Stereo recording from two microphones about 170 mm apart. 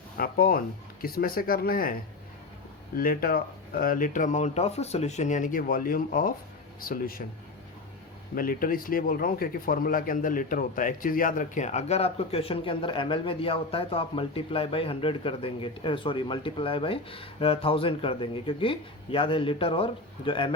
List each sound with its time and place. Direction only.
0.2 s speech: 60° left (ahead or behind)
8.4 s speech: 55° left (ahead or behind); by 20.5 s 30° left (ahead or behind)